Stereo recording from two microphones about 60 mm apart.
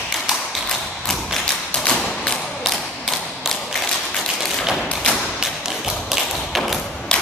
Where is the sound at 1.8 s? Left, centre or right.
Centre.